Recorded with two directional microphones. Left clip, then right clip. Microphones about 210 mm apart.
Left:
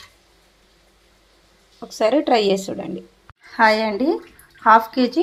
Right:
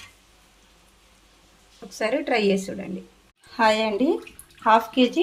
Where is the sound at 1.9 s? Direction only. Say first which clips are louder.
Left 7 dB; 25° left (ahead or behind).